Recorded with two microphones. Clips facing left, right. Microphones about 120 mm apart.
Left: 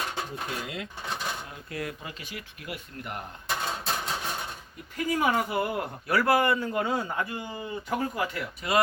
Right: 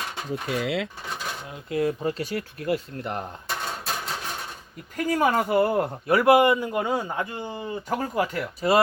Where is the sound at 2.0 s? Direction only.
40° right (ahead or behind).